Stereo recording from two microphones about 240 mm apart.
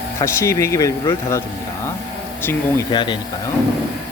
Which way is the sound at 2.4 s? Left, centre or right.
Centre.